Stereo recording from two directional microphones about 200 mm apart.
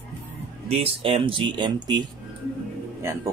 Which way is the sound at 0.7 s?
30° right (ahead or behind).